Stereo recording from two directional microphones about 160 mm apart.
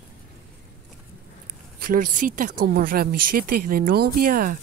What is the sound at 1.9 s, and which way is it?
Speech, 55° right (ahead or behind).